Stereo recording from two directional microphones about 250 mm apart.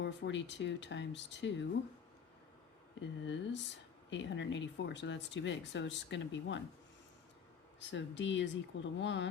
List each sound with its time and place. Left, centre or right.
0.0 s speech: left
3.0 s speech: left
7.8 s speech: left